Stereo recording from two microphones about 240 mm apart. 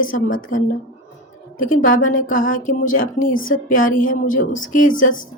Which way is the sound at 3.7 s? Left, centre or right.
Left.